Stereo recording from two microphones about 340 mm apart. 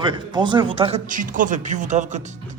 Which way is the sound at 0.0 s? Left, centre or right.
Centre.